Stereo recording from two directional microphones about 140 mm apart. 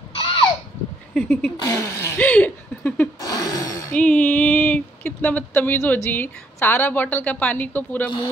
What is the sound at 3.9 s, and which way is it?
Speech, 10° left (ahead or behind).